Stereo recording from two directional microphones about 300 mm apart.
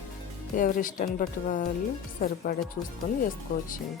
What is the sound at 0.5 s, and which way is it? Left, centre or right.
A woman's voice, left.